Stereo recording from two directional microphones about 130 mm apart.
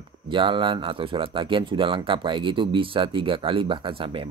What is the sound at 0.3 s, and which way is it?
Speech, 40° right (ahead or behind).